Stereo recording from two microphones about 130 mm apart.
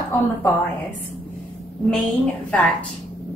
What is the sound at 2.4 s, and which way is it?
Speech, 10° left (ahead or behind).